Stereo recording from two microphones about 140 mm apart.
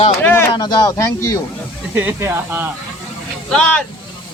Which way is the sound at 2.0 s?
15° right (ahead or behind).